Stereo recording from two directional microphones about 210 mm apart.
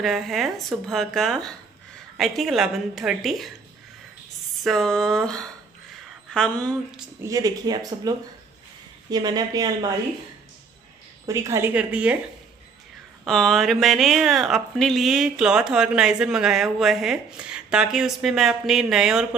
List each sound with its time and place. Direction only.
0.0 s speech: centre (ahead or behind)
4.6 s speech: centre (ahead or behind)
7.2 s speech: 15° right (ahead or behind)
9.1 s speech: 20° right (ahead or behind)
11.2 s speech: 15° right (ahead or behind)
13.2 s speech: centre (ahead or behind)